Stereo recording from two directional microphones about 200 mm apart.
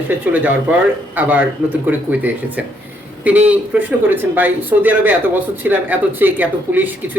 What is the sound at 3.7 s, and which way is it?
Speech, 5° right (ahead or behind).